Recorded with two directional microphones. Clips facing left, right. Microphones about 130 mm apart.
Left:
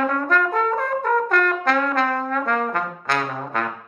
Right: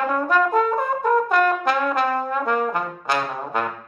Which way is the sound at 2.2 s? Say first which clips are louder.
Right 1 dB; 5° right (ahead or behind).